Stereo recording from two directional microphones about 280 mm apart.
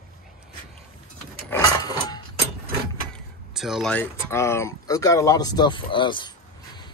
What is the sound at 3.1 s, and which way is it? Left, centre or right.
Speech, centre.